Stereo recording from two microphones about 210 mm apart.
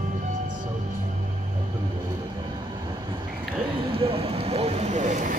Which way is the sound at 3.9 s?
25° right (ahead or behind).